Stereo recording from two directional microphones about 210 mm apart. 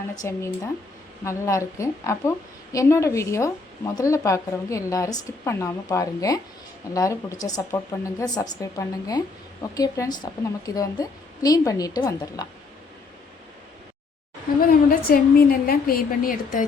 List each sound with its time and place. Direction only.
0.2 s a woman's voice: 15° left (ahead or behind)
14.6 s a woman's voice: 45° left (ahead or behind)